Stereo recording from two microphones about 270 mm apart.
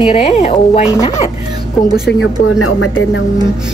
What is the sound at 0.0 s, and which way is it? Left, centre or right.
Speech, left.